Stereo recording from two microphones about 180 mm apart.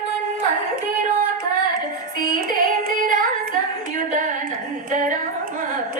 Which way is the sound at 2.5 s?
50° right (ahead or behind).